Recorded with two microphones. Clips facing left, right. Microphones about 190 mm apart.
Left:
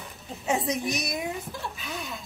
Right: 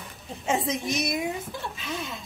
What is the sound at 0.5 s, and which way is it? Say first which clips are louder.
Speech: right 1 dB; centre (ahead or behind).